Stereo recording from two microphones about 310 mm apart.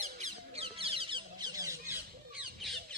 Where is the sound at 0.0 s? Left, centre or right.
Right.